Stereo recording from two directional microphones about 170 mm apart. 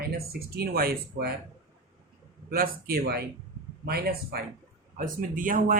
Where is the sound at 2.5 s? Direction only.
60° right (ahead or behind).